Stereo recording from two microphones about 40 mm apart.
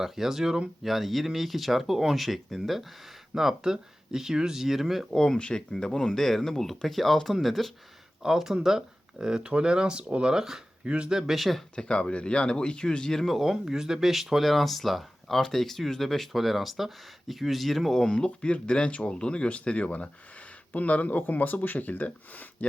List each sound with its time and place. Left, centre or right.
0.0 s speech: centre
5.1 s speech: centre
5.4 s speech: left; by 7.7 s centre
8.2 s speech: centre
10.3 s speech: centre
10.8 s speech: right
11.1 s speech: centre
11.3 s speech: centre
11.7 s speech: left
13.2 s speech: centre
18.1 s speech: left